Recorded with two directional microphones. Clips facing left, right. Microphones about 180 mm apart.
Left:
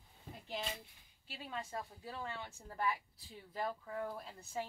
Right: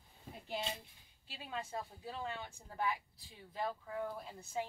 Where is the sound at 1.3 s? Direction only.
25° right (ahead or behind).